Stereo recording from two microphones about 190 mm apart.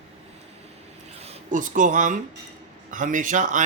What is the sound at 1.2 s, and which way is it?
Speech, 40° right (ahead or behind).